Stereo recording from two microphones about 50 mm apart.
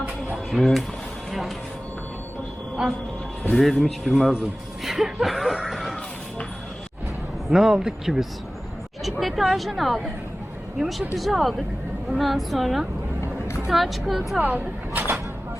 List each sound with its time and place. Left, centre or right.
0.5 s a woman's voice: centre
2.8 s speech: centre
3.5 s a woman's voice: centre
5.6 s music: centre
7.5 s a woman's voice: centre
14.3 s speech: right